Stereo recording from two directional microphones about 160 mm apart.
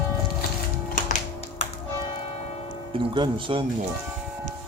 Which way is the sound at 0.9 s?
50° left (ahead or behind).